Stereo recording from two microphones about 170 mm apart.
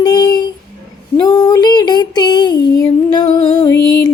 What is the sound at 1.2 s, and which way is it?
Female singing, 20° left (ahead or behind).